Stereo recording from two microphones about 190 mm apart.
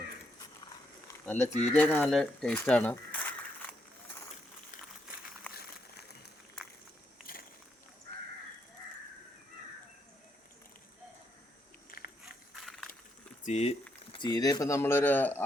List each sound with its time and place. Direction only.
1.2 s speech: 5° left (ahead or behind)
2.1 s crumpling: 5° left (ahead or behind)
5.5 s a sound: 55° left (ahead or behind)
11.9 s biting: 50° left (ahead or behind)
12.2 s a sound: centre (ahead or behind)
13.4 s speech: 35° left (ahead or behind)
14.1 s speech: 20° left (ahead or behind)